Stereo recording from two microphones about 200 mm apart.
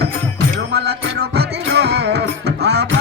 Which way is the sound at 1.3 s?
55° right (ahead or behind).